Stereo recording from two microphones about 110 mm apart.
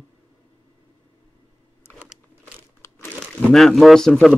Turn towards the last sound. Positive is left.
turn(degrees=5)  # may be behind; listen again after turning